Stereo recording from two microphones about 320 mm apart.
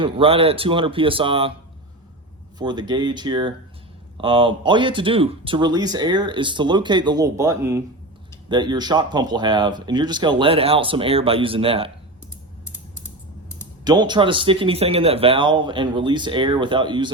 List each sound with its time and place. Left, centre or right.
0.0 s speech: centre
2.6 s speech: centre
13.8 s speech: centre